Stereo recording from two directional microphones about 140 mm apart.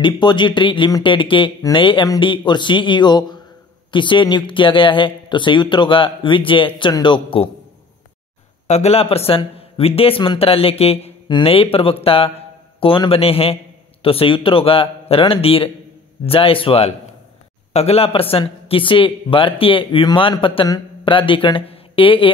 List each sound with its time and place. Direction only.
0.0 s speech: 35° left (ahead or behind)
8.6 s a man's voice: 50° left (ahead or behind)